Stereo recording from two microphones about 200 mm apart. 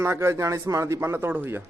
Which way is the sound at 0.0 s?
10° right (ahead or behind).